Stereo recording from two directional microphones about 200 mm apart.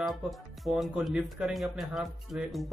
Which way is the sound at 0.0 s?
Centre (ahead or behind).